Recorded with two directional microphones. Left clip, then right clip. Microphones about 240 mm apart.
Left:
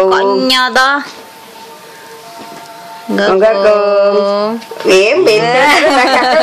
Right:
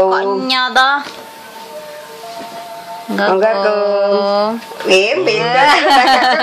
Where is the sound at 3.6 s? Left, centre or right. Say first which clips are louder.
Left 5 dB; centre.